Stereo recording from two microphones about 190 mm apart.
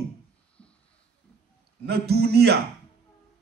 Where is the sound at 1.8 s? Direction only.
55° right (ahead or behind).